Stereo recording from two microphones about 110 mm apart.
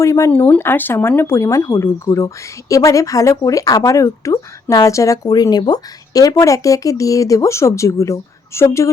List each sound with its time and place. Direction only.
0.0 s speech: 25° left (ahead or behind)
0.3 s speech: 15° left (ahead or behind)